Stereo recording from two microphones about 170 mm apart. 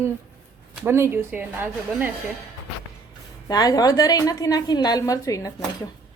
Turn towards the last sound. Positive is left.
turn(degrees=20)  # may be behind; listen again after turning